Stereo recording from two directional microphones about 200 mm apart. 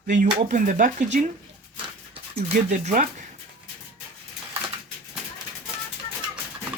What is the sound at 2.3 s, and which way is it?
Speech, 35° right (ahead or behind).